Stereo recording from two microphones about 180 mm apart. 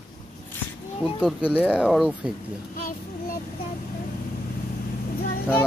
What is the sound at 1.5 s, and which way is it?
Speech, 5° right (ahead or behind).